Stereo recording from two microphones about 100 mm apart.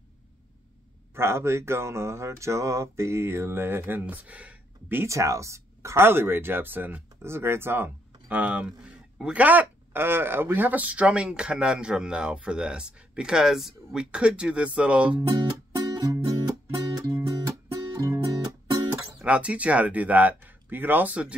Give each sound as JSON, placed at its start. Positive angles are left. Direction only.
{"t": 1.1, "sound": "speech", "side_deg": -25}
{"t": 5.0, "sound": "speech", "side_deg": -30}
{"t": 15.7, "sound": "music", "side_deg": -40}
{"t": 19.1, "sound": "speech", "side_deg": -15}